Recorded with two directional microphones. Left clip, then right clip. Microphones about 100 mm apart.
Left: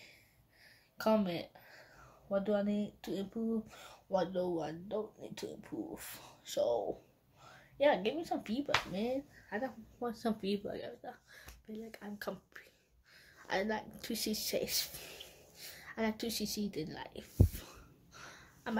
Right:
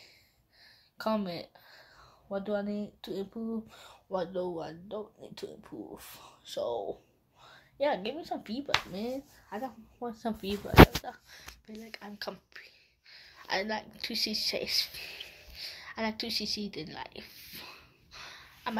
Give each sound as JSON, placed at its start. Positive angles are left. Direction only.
{"t": 0.9, "sound": "a woman's voice", "side_deg": -5}
{"t": 10.0, "sound": "speech", "side_deg": 5}
{"t": 11.2, "sound": "speech", "side_deg": 15}
{"t": 12.2, "sound": "speech", "side_deg": 35}
{"t": 17.6, "sound": "a sound", "side_deg": 30}